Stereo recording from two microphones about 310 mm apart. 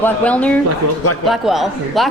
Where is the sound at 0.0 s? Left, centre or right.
Centre.